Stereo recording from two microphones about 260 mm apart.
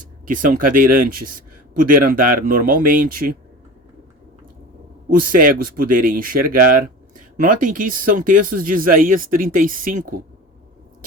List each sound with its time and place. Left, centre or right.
0.3 s speech: right
5.1 s speech: right